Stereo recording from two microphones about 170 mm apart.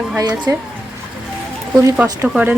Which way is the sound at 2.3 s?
5° right (ahead or behind).